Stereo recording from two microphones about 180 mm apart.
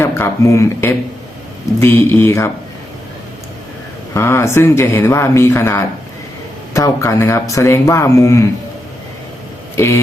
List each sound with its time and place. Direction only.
0.0 s speech: 15° left (ahead or behind)
4.1 s speech: 15° left (ahead or behind)
9.7 s speech: 15° left (ahead or behind)